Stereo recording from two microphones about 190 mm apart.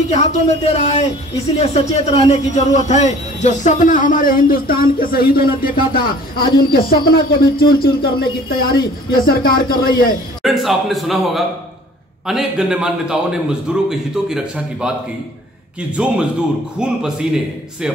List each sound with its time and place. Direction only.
0.1 s speech: 35° left (ahead or behind)
10.4 s a man's voice: centre (ahead or behind)
16.0 s a man's voice: 5° right (ahead or behind)